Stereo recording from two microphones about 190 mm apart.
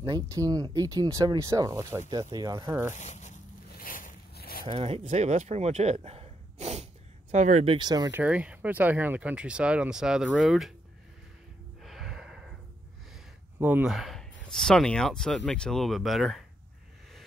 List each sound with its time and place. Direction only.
0.0 s speech: 15° right (ahead or behind)
2.9 s zipper: 40° left (ahead or behind)
4.6 s speech: 30° right (ahead or behind)
8.2 s speech: 5° right (ahead or behind)
11.8 s a sound: centre (ahead or behind)
13.6 s speech: 10° right (ahead or behind)